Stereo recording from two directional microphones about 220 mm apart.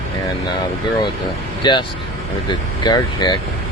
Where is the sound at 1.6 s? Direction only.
20° left (ahead or behind).